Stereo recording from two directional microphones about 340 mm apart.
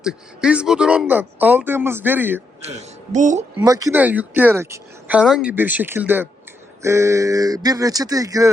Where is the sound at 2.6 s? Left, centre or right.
Centre.